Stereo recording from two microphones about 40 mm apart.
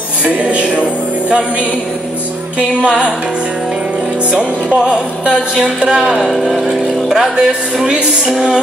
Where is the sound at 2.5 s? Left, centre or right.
Right.